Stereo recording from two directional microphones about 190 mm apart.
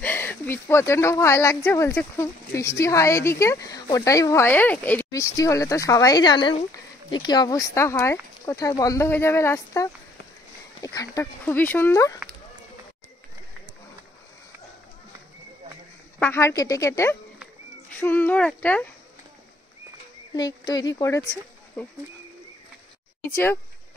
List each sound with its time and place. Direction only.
0.0 s a woman's voice: 10° left (ahead or behind)
16.2 s a woman's voice: 10° left (ahead or behind)
20.3 s speech: 20° left (ahead or behind)
23.3 s a woman's voice: 10° left (ahead or behind)